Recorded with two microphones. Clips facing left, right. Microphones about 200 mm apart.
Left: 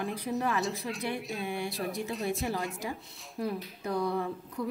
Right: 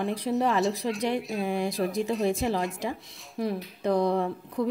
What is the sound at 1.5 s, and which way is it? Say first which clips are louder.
Speech: right 7 dB; 90° right.